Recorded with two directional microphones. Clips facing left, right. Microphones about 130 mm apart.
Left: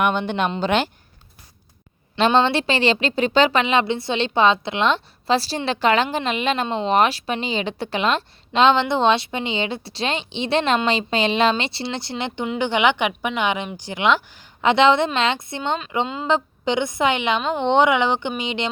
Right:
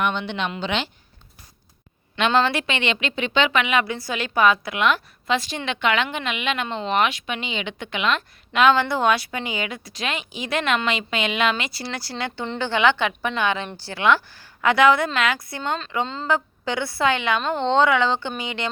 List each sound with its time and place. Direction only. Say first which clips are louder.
0.0 s speech: left 4 dB; 45° left (ahead or behind)
2.1 s a woman's voice: left 3 dB; 30° left (ahead or behind)